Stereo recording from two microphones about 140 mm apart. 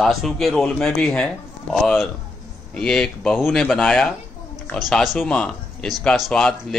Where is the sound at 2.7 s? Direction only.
5° left (ahead or behind).